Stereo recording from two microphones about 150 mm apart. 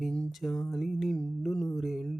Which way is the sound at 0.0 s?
5° left (ahead or behind).